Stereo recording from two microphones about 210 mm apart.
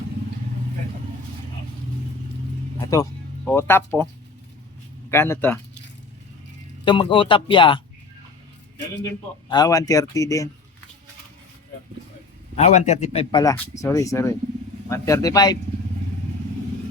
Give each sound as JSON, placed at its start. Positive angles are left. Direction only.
{"t": 2.8, "sound": "speech", "side_deg": 15}
{"t": 5.1, "sound": "speech", "side_deg": 10}
{"t": 6.8, "sound": "speech", "side_deg": 25}
{"t": 9.5, "sound": "speech", "side_deg": 15}
{"t": 12.5, "sound": "a man's voice", "side_deg": 35}
{"t": 13.3, "sound": "speech", "side_deg": 15}